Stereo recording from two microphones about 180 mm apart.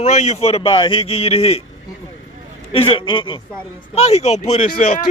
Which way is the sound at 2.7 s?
30° left (ahead or behind).